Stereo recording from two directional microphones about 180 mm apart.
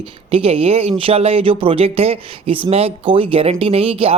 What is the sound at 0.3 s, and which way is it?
Speech, 30° right (ahead or behind).